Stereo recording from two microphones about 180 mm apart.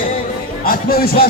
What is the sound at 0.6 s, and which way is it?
Speech, 55° left (ahead or behind).